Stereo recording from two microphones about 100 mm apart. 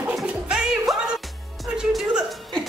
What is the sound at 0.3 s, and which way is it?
Music, 5° right (ahead or behind).